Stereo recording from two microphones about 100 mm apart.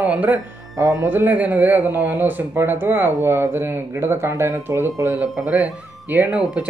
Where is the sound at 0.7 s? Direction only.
35° right (ahead or behind).